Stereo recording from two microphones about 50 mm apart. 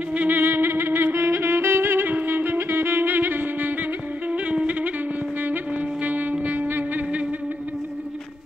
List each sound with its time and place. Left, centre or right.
0.3 s music: right
4.3 s music: right
5.4 s saxophone: right
6.4 s music: right